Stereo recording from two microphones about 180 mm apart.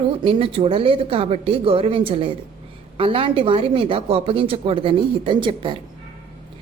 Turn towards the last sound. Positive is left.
turn(degrees=-30)  # may be behind; listen again after turning